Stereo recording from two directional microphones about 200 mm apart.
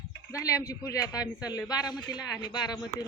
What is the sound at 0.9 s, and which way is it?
Speech, 20° left (ahead or behind).